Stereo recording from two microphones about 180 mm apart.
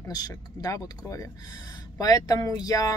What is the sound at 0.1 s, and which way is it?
Speech, 20° left (ahead or behind).